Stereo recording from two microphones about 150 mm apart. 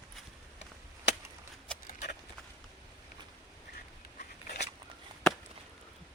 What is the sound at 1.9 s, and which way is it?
Horse, 60° left (ahead or behind).